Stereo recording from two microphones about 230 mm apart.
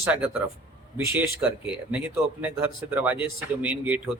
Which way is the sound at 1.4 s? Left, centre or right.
Centre.